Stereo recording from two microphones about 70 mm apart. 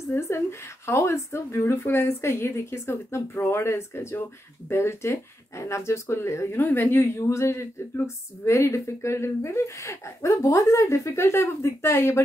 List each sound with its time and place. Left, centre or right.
0.1 s a woman's voice: left
6.6 s a woman's voice: left